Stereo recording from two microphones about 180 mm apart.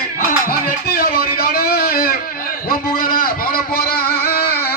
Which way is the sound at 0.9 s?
55° left (ahead or behind).